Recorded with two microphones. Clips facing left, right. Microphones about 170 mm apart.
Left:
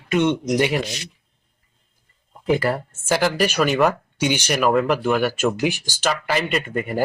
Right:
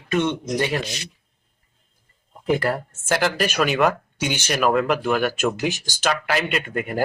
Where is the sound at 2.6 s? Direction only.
5° left (ahead or behind).